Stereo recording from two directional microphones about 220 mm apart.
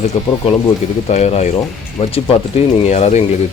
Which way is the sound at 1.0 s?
30° left (ahead or behind).